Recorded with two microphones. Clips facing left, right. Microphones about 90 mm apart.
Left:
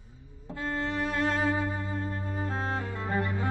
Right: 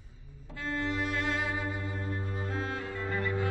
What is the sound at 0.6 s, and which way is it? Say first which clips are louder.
Music: left 2 dB; 40° left (ahead or behind).